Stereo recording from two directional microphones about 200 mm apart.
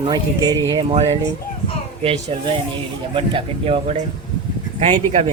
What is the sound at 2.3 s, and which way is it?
Speech, 30° right (ahead or behind).